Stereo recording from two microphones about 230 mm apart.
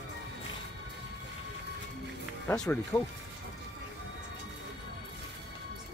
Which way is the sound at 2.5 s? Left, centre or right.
Centre.